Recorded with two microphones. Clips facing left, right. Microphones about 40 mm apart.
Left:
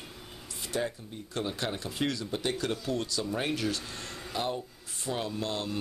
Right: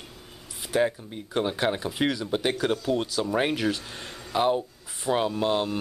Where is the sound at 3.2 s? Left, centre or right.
Right.